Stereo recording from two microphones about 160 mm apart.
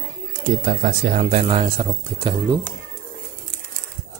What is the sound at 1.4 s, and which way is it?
Speech, 35° right (ahead or behind).